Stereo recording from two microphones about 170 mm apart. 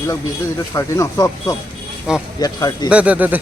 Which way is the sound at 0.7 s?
15° left (ahead or behind).